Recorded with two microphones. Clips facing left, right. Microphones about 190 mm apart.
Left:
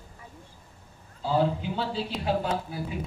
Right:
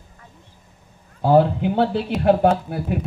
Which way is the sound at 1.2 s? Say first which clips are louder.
Right 10 dB; 60° right (ahead or behind).